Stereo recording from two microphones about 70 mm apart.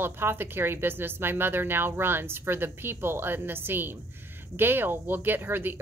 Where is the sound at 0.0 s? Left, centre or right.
Right.